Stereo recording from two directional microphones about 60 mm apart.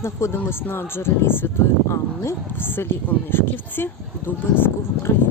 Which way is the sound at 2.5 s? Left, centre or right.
Left.